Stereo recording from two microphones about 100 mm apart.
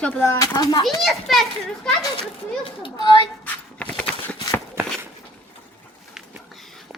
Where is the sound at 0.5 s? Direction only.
45° left (ahead or behind).